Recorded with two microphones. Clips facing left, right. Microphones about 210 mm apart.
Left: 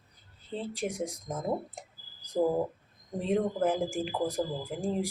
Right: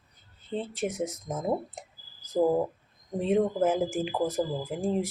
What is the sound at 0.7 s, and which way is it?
Speech, 5° right (ahead or behind).